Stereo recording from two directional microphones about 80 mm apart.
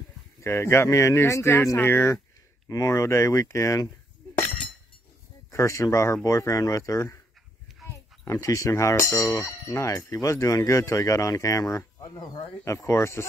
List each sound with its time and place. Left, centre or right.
0.4 s speech: left
2.7 s speech: left
5.5 s speech: left
12.0 s speech: left
12.6 s speech: left